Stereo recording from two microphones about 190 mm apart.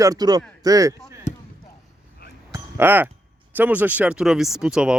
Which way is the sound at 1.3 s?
40° left (ahead or behind).